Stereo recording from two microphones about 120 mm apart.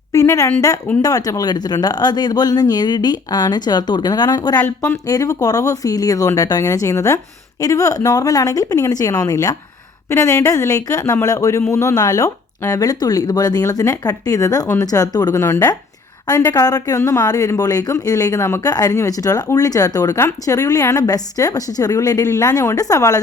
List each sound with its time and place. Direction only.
0.1 s a sound: 25° left (ahead or behind)
1.0 s speech: 30° left (ahead or behind)
4.5 s speech: 15° left (ahead or behind)
5.0 s speech: 30° left (ahead or behind)